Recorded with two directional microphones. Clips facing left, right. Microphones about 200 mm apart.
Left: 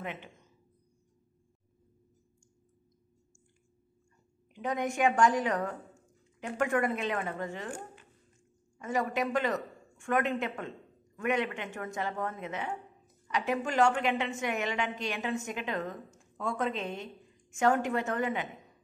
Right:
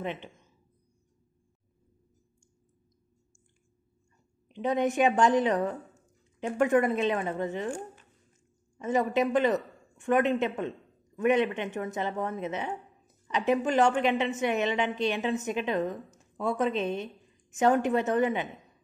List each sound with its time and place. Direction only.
0.0 s a woman's voice: 25° right (ahead or behind)
4.5 s a sound: 25° right (ahead or behind)
4.9 s a woman's voice: 20° right (ahead or behind)
8.7 s a man's voice: 20° right (ahead or behind)